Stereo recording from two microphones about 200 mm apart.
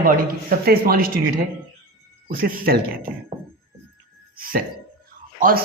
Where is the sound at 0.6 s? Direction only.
50° right (ahead or behind).